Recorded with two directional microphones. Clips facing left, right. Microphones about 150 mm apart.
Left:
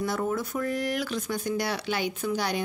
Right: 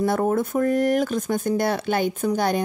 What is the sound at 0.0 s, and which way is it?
A woman's voice, 50° right (ahead or behind).